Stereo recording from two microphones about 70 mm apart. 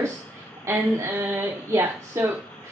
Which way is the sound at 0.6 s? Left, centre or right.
Right.